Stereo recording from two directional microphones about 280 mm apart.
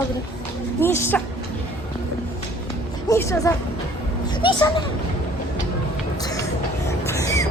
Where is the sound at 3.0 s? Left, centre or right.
Centre.